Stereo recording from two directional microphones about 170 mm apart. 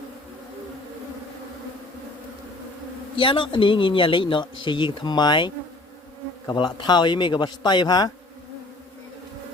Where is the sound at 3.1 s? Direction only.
30° left (ahead or behind).